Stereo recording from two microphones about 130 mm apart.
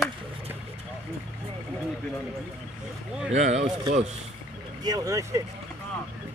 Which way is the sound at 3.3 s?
60° right (ahead or behind).